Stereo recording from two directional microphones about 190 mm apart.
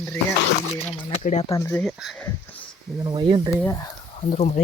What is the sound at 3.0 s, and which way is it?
Speech, 25° right (ahead or behind).